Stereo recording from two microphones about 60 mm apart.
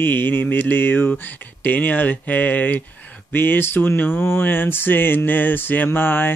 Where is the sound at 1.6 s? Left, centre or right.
Left.